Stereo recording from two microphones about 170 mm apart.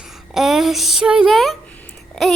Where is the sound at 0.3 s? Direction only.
Centre (ahead or behind).